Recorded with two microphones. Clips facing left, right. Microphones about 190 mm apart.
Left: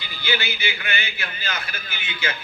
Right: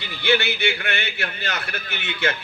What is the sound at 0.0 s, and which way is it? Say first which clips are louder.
A man's voice: right 6 dB; 75° right (ahead or behind).